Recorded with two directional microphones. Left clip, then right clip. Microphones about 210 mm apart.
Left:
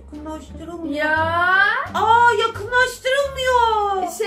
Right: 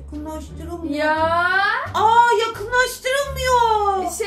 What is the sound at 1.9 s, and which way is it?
Speech, 30° right (ahead or behind).